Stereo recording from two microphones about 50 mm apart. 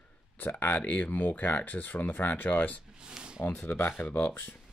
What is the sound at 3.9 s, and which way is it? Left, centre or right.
Speech, left.